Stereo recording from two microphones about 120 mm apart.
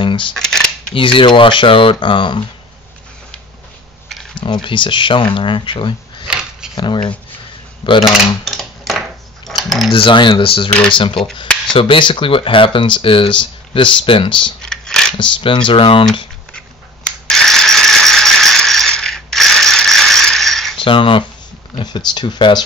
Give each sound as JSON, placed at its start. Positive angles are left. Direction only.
{"t": 0.0, "sound": "cutlery", "side_deg": 45}
{"t": 0.3, "sound": "cutlery", "side_deg": 5}
{"t": 0.9, "sound": "speech", "side_deg": 45}
{"t": 4.4, "sound": "speech", "side_deg": 40}
{"t": 6.2, "sound": "a sound", "side_deg": -5}
{"t": 6.7, "sound": "speech", "side_deg": 40}
{"t": 8.0, "sound": "a sound", "side_deg": 0}
{"t": 9.8, "sound": "speech", "side_deg": 50}
{"t": 14.6, "sound": "a sound", "side_deg": 5}
{"t": 15.1, "sound": "speech", "side_deg": 40}
{"t": 16.5, "sound": "rattle", "side_deg": 5}
{"t": 20.8, "sound": "speech", "side_deg": 45}